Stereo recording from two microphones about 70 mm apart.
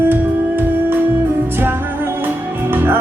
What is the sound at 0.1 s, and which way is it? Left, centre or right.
Music, right.